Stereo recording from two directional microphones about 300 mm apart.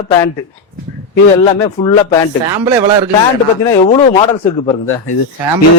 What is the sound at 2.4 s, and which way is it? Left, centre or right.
Speech, centre.